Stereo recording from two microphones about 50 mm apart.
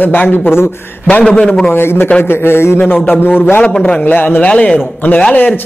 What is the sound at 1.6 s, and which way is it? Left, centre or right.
A woman's voice, left.